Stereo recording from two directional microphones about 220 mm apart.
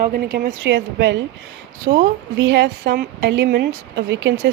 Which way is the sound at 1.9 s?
30° right (ahead or behind).